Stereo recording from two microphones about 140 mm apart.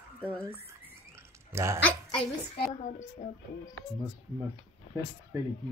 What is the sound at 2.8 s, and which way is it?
Speech, 65° left (ahead or behind).